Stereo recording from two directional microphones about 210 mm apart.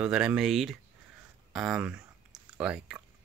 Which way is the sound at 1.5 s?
5° right (ahead or behind).